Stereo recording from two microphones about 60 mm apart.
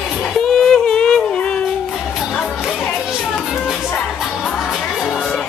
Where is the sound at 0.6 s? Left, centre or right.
Centre.